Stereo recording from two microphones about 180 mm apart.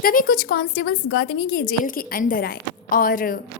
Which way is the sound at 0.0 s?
50° left (ahead or behind).